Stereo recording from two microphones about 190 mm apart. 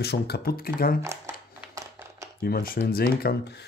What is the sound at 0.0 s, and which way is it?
Speech, 60° left (ahead or behind).